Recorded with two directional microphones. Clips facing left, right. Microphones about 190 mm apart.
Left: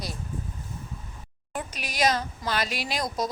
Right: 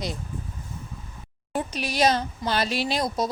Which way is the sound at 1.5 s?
30° right (ahead or behind).